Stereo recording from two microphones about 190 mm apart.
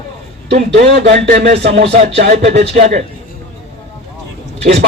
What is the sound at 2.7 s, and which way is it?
Music, 35° right (ahead or behind).